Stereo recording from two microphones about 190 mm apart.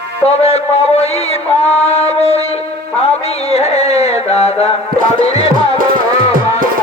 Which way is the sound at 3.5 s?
35° left (ahead or behind).